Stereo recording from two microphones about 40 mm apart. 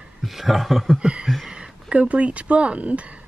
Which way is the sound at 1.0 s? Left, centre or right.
Right.